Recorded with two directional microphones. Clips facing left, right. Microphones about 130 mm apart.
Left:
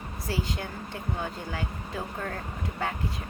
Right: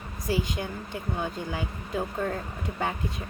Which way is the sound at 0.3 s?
15° right (ahead or behind).